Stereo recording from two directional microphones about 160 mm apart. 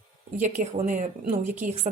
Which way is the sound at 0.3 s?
50° right (ahead or behind).